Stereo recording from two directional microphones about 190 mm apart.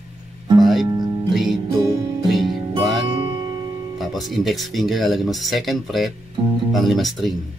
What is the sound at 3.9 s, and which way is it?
Speech, centre (ahead or behind).